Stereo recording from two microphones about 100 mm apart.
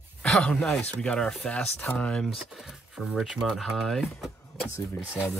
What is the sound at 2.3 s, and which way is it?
Speech, 5° right (ahead or behind).